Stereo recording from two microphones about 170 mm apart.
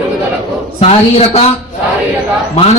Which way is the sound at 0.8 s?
40° left (ahead or behind).